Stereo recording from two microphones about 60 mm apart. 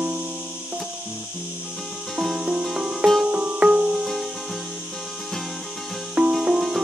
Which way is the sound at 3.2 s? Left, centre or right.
Right.